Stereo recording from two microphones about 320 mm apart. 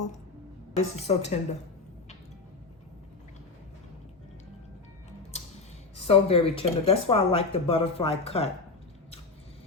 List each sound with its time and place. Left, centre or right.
0.8 s a woman's voice: centre
5.3 s a sound: centre
6.0 s speech: centre